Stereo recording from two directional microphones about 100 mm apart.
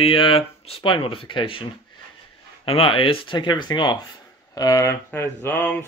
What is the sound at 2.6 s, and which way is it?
Speech, 65° left (ahead or behind).